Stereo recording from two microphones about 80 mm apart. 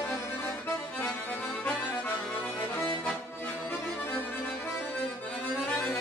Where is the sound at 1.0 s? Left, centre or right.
Centre.